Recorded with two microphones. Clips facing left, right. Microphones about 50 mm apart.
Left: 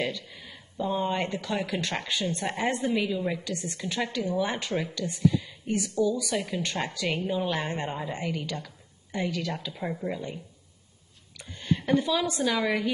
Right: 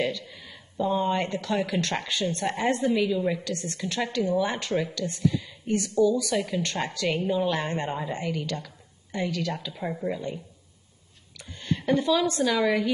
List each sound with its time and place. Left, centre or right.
0.0 s speech: centre
3.4 s speech: centre